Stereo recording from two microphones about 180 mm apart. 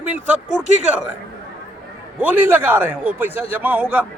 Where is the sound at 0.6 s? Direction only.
40° right (ahead or behind).